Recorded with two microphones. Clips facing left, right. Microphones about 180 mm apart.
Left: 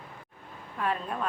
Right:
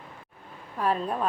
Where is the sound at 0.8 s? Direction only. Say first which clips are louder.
Right 4 dB; 35° right (ahead or behind).